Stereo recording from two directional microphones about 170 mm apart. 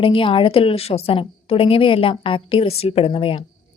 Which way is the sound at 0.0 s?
30° left (ahead or behind).